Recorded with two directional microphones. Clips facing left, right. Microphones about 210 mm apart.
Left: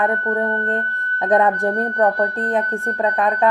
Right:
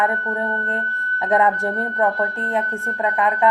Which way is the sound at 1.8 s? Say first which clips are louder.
Left 3 dB; 40° left (ahead or behind).